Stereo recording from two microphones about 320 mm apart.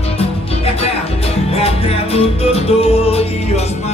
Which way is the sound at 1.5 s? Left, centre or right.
Centre.